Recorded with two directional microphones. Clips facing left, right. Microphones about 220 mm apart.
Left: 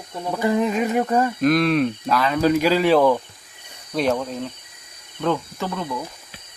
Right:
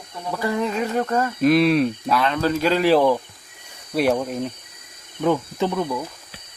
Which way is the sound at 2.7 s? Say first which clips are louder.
Right 3 dB; centre (ahead or behind).